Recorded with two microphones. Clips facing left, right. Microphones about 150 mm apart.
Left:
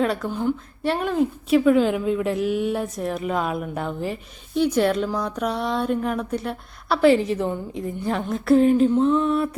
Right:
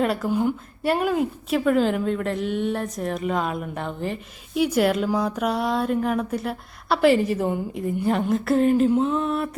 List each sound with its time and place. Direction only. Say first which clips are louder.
0.0 s a woman's voice: right 1 dB; 5° right (ahead or behind)